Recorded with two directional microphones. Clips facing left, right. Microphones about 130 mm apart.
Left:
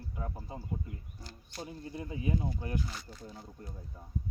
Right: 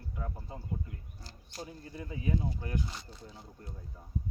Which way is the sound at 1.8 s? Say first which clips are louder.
Left 1 dB; 20° left (ahead or behind).